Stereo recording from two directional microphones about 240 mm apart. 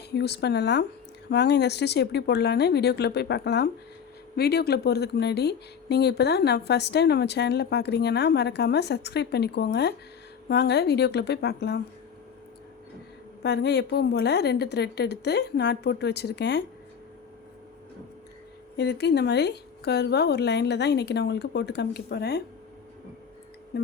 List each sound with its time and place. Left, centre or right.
0.1 s speech: left
13.4 s speech: left
18.8 s speech: left
23.7 s music: left